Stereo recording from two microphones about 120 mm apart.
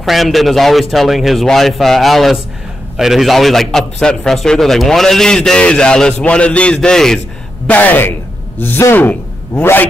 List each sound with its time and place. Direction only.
0.0 s a man's voice: centre (ahead or behind); by 9.8 s 15° left (ahead or behind)